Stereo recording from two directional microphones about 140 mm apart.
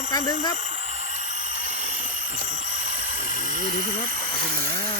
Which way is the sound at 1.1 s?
60° right (ahead or behind).